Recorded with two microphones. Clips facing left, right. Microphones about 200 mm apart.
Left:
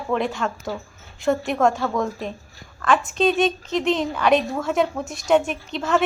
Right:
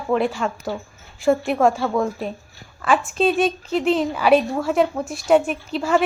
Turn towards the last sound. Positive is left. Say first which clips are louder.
# right 2 dB
turn(degrees=-5)  # may be behind; listen again after turning